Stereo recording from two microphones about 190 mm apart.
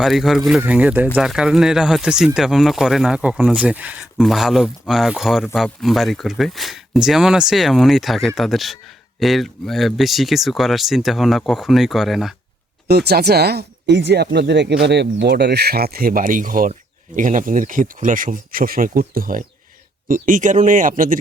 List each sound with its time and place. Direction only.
0.0 s speech: centre (ahead or behind)
12.9 s speech: 55° right (ahead or behind)